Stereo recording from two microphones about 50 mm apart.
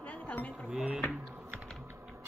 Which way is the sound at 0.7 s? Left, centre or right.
Centre.